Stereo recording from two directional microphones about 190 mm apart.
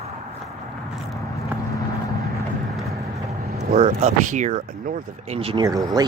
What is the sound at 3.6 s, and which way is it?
Vehicle, 40° right (ahead or behind).